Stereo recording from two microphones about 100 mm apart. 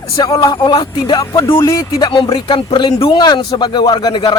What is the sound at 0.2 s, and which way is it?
Speech, 40° left (ahead or behind).